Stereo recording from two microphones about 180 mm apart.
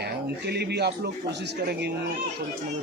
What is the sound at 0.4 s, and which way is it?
Speech, 65° right (ahead or behind).